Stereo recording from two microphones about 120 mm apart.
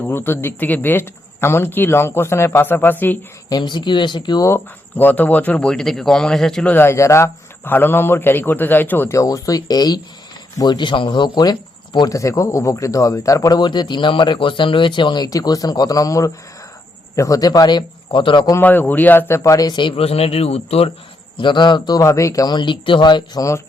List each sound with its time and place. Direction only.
0.0 s a man's voice: 20° left (ahead or behind)
3.5 s a man's voice: 40° left (ahead or behind)
4.4 s speech: 20° left (ahead or behind)
6.7 s a man's voice: 20° left (ahead or behind); by 18.5 s 40° left (ahead or behind)
18.5 s a man's voice: 15° left (ahead or behind); by 20.9 s 55° left (ahead or behind)
21.3 s a man's voice: 40° left (ahead or behind); by 23.6 s 25° left (ahead or behind)